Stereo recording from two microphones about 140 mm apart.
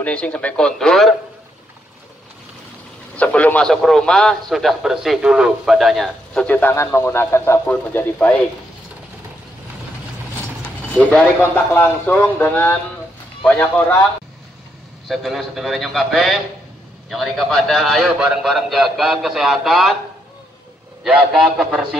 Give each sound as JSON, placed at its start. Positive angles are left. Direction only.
{"t": 0.0, "sound": "a man's voice", "side_deg": 10}
{"t": 3.2, "sound": "a man's voice", "side_deg": 10}
{"t": 6.4, "sound": "a man's voice", "side_deg": 15}
{"t": 10.9, "sound": "a man's voice", "side_deg": 10}
{"t": 15.0, "sound": "a man's voice", "side_deg": 0}
{"t": 21.0, "sound": "a man's voice", "side_deg": -5}